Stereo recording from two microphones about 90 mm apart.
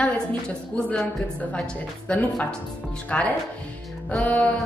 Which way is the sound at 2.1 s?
15° left (ahead or behind).